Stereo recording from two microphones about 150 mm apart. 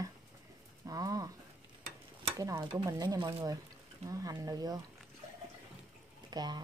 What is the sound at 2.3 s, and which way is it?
Speech, 20° right (ahead or behind).